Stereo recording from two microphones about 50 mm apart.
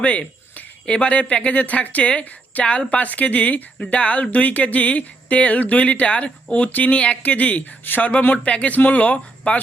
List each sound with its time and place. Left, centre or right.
0.0 s speech: left